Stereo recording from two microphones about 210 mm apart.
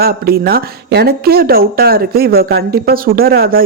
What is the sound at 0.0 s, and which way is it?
Speech, 45° right (ahead or behind).